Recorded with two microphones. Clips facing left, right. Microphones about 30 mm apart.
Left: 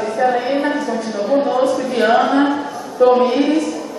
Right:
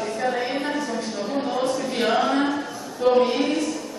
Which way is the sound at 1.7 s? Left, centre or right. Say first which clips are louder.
Left 7 dB; centre.